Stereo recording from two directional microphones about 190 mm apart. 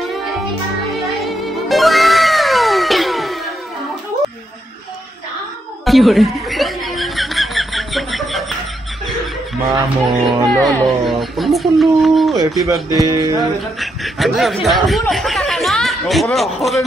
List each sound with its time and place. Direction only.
1.2 s music: centre (ahead or behind)
5.9 s chuckle: centre (ahead or behind)
9.7 s speech: 25° right (ahead or behind)
10.6 s speech: centre (ahead or behind)
13.0 s speech: 20° right (ahead or behind)
13.7 s speech: centre (ahead or behind)